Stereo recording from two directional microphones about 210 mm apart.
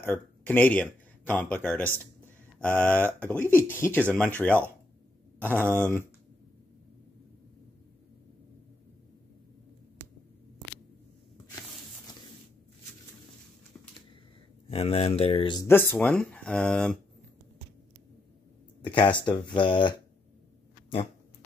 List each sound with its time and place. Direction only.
0.0 s speech: 10° left (ahead or behind)
5.4 s speech: 10° right (ahead or behind)
5.7 s speech: 10° left (ahead or behind)
14.7 s speech: 30° left (ahead or behind); by 17.0 s 5° left (ahead or behind)
18.8 s speech: 25° left (ahead or behind)